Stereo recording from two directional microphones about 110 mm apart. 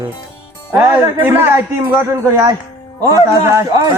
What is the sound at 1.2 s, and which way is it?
A man's voice, 20° right (ahead or behind).